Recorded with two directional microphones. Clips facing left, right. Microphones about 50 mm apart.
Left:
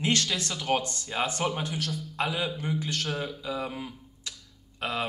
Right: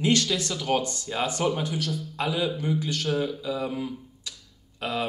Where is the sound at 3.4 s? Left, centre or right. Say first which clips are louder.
Right 4 dB; left.